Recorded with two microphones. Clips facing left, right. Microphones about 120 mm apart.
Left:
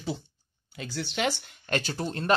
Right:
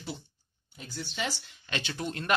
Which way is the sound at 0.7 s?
85° left.